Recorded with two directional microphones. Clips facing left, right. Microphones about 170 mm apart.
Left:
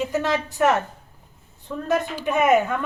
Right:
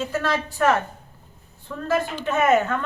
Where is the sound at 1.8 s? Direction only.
15° left (ahead or behind).